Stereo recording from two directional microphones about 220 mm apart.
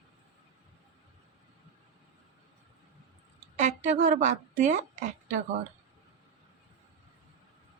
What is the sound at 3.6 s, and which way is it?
A woman's voice, 35° right (ahead or behind).